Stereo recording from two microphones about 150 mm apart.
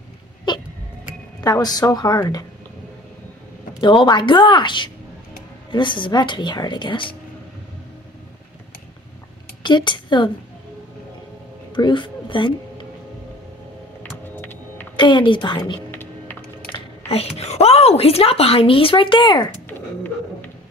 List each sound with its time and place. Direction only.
0.5 s a sound: 30° left (ahead or behind)
1.4 s a woman's voice: 25° left (ahead or behind)
3.8 s a woman's voice: 30° left (ahead or behind)
9.6 s a woman's voice: 30° left (ahead or behind)
11.7 s speech: 35° left (ahead or behind)
14.4 s music: 15° left (ahead or behind)
15.0 s a woman's voice: 30° left (ahead or behind)
15.9 s typing: 15° left (ahead or behind)
17.1 s a woman's voice: 45° left (ahead or behind)